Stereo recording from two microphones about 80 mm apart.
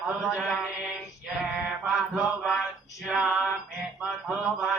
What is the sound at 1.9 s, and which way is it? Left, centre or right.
Mantra, centre.